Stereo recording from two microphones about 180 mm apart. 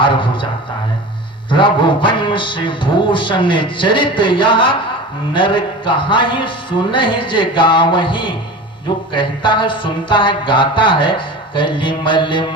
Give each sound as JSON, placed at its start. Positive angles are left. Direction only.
{"t": 0.0, "sound": "a man's voice", "side_deg": 25}
{"t": 1.5, "sound": "a man's voice", "side_deg": 25}